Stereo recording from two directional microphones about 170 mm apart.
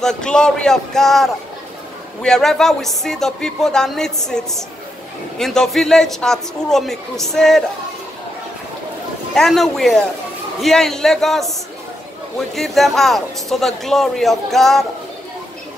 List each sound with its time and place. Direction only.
0.0 s a man's voice: 5° left (ahead or behind)
9.3 s a man's voice: centre (ahead or behind)